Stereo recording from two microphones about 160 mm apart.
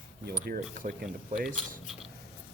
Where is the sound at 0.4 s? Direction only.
60° right (ahead or behind).